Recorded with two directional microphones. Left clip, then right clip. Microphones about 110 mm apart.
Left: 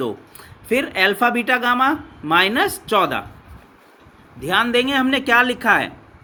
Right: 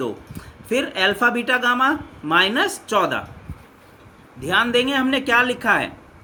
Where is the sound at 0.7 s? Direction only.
40° left (ahead or behind).